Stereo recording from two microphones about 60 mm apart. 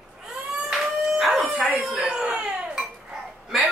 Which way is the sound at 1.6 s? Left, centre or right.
Centre.